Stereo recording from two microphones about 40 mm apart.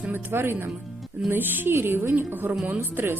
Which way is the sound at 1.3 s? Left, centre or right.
Right.